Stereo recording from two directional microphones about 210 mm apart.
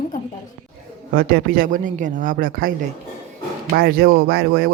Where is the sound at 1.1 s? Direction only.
45° right (ahead or behind).